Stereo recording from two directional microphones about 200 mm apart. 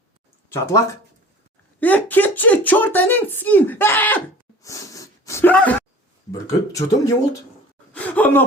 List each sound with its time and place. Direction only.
0.5 s speech: 15° left (ahead or behind)
1.8 s speech: 10° left (ahead or behind)
4.6 s a sound: 15° left (ahead or behind)
6.3 s speech: 15° left (ahead or behind)
7.9 s gasp: 10° left (ahead or behind)